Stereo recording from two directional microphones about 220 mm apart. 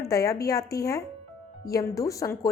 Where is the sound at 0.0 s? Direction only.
15° left (ahead or behind).